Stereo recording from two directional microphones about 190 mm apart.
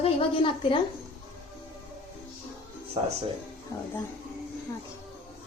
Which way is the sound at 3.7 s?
20° left (ahead or behind).